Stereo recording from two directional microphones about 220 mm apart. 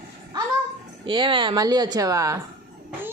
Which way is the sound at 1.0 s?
20° right (ahead or behind).